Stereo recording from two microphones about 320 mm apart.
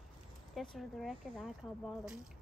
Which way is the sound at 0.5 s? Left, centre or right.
Centre.